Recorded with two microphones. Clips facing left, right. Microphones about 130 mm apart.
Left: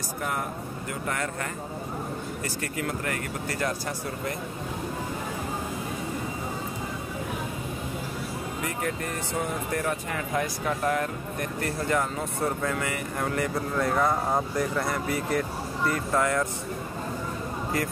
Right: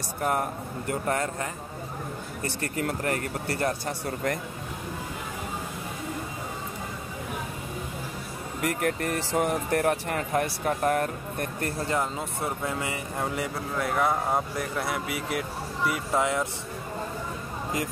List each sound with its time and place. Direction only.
0.2 s speech: 45° right (ahead or behind)
1.1 s speech: 30° right (ahead or behind)
2.7 s speech: 40° right (ahead or behind)
8.6 s speech: 60° right (ahead or behind)
11.9 s speech: 20° right (ahead or behind)
13.7 s speech: 5° right (ahead or behind)